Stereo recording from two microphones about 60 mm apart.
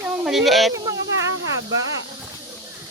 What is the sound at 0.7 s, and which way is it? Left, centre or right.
Speech, right.